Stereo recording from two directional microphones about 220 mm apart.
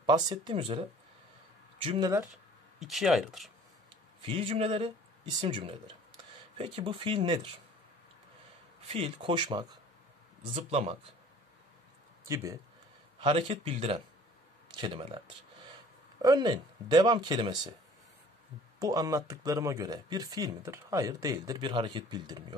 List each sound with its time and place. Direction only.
0.0 s speech: 20° right (ahead or behind)
2.8 s speech: centre (ahead or behind)
4.2 s speech: 25° right (ahead or behind)
8.8 s speech: 25° right (ahead or behind)
13.2 s speech: 25° right (ahead or behind)
18.8 s speech: 15° right (ahead or behind)